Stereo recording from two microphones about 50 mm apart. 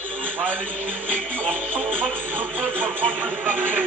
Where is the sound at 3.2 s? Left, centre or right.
Right.